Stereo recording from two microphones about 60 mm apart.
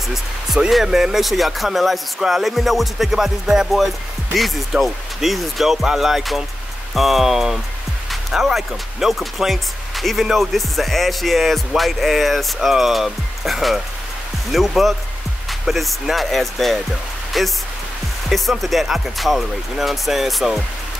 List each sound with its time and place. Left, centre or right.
0.1 s speech: centre